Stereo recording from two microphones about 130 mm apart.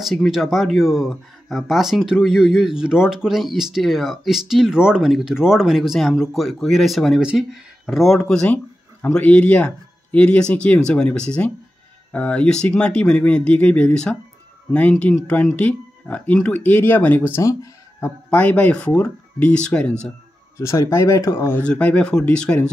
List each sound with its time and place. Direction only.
0.0 s speech: centre (ahead or behind); by 18.1 s 25° left (ahead or behind)
18.3 s speech: 10° left (ahead or behind)
20.5 s speech: 25° left (ahead or behind)
21.6 s speech: 10° left (ahead or behind)